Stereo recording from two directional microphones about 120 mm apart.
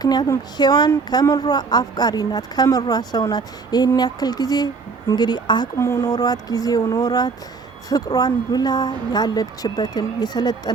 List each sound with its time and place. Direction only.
0.0 s speech: 35° left (ahead or behind)
5.7 s speech: 25° left (ahead or behind)